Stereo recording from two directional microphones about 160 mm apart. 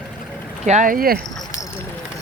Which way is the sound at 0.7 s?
55° right (ahead or behind).